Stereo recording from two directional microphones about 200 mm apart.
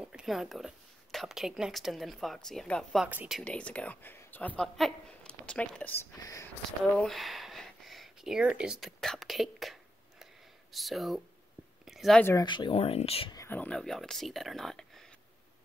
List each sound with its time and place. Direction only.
0.0 s speech: 5° right (ahead or behind)
7.0 s a sound: centre (ahead or behind)
10.7 s speech: centre (ahead or behind)
11.8 s a sound: centre (ahead or behind)
12.3 s speech: 20° left (ahead or behind)
13.4 s speech: 10° left (ahead or behind)